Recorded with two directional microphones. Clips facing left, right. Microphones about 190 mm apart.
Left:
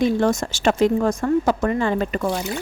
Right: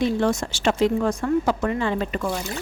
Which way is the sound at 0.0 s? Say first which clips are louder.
Left 3 dB; 45° left (ahead or behind).